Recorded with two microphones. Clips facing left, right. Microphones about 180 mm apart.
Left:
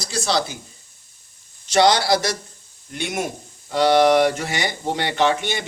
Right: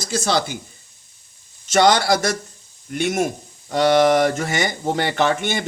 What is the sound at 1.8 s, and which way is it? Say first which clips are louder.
Speech: right 1 dB; 50° right (ahead or behind).